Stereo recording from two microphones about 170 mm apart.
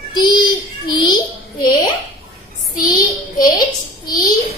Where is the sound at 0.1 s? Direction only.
25° left (ahead or behind).